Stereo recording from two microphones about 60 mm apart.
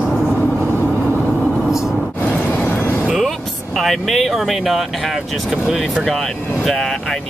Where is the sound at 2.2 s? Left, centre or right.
Left.